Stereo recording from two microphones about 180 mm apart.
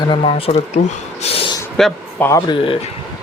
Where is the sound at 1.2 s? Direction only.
35° left (ahead or behind).